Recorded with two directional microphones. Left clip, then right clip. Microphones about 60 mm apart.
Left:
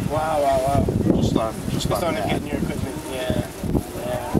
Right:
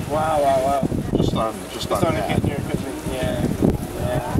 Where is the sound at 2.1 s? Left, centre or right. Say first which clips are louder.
Right 1 dB; centre.